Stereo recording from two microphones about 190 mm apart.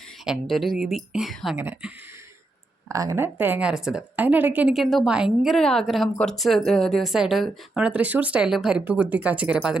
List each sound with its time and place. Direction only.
0.3 s a woman's voice: centre (ahead or behind)
1.5 s speech: 10° right (ahead or behind)
2.9 s a woman's voice: 15° right (ahead or behind)